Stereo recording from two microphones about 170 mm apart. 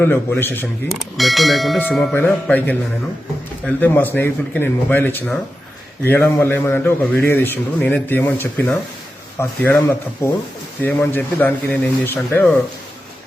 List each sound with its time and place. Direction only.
0.0 s a man's voice: 10° left (ahead or behind)
0.9 s a man's voice: centre (ahead or behind)